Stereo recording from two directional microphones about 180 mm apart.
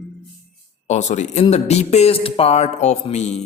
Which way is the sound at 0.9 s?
40° left (ahead or behind).